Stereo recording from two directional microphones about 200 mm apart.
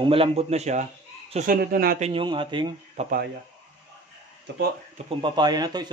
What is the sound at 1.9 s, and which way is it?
A man's voice, 30° right (ahead or behind).